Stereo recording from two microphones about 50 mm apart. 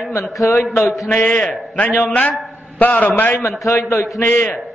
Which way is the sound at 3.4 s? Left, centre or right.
Left.